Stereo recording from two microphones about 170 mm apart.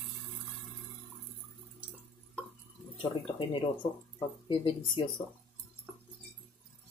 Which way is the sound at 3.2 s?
30° left (ahead or behind).